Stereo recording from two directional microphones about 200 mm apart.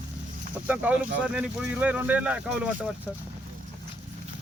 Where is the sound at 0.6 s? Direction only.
10° right (ahead or behind).